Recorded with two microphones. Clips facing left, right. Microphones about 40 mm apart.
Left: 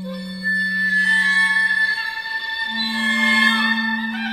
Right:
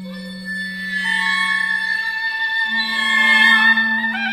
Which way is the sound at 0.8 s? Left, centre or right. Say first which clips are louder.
Left 2 dB; right.